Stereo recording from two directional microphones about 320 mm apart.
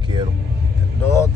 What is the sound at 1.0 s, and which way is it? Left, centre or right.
Speech, centre.